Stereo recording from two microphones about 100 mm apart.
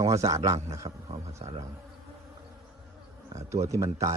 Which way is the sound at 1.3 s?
90° right.